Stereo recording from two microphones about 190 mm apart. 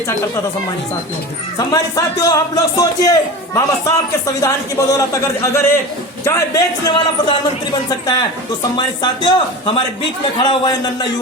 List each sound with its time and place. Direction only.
1.5 s a man's voice: 20° left (ahead or behind)